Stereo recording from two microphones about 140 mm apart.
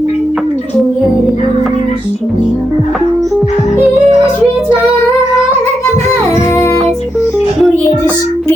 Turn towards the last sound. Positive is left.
turn(degrees=20)  # may be behind; listen again after turning